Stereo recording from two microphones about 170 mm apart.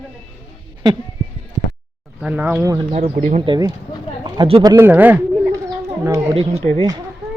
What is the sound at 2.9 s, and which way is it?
Speech, 35° right (ahead or behind).